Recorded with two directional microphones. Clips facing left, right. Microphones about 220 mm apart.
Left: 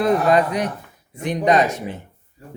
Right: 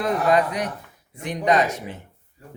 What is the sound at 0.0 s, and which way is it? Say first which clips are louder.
A man's voice: left 4 dB; 30° left (ahead or behind).